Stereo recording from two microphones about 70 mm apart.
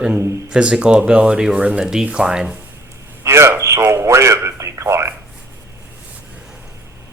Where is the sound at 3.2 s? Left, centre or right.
Right.